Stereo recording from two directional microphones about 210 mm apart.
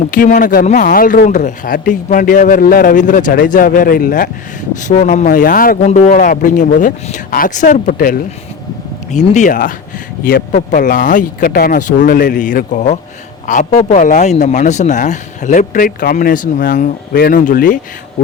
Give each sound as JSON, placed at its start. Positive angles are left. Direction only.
{"t": 0.1, "sound": "a man's voice", "side_deg": 40}